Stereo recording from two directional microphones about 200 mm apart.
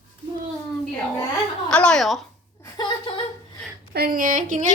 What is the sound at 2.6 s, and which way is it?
Speech, 20° left (ahead or behind).